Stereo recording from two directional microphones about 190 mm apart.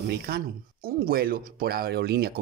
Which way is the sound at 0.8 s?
50° right (ahead or behind).